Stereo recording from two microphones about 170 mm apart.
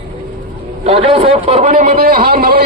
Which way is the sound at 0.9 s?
35° right (ahead or behind).